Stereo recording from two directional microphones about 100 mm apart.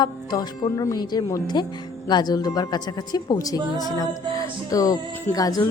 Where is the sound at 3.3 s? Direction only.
35° left (ahead or behind).